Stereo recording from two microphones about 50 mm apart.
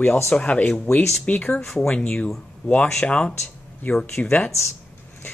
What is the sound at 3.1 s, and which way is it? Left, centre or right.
Speech, left.